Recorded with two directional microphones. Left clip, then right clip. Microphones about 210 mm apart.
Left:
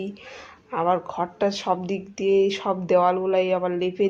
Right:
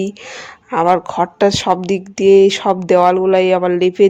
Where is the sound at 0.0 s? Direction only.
45° right (ahead or behind).